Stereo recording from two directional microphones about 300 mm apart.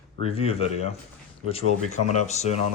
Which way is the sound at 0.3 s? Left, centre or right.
Centre.